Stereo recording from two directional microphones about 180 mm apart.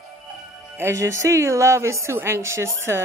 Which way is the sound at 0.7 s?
15° right (ahead or behind).